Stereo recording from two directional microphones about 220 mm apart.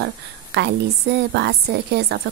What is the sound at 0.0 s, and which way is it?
A woman's voice, 50° right (ahead or behind).